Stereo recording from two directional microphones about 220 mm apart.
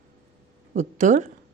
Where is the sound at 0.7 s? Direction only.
35° right (ahead or behind).